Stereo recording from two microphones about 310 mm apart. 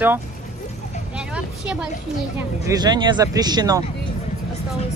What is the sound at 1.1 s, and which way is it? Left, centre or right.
Vehicle, centre.